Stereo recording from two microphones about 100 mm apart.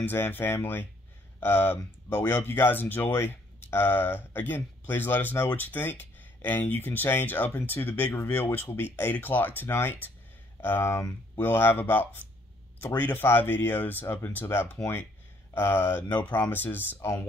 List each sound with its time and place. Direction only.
0.0 s speech: 20° left (ahead or behind)